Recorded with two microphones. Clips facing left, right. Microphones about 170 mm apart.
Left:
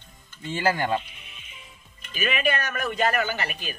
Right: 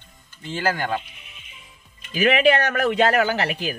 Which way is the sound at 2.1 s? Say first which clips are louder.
Right 8 dB; 75° right (ahead or behind).